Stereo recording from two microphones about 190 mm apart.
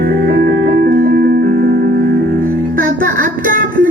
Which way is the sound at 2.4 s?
45° right (ahead or behind).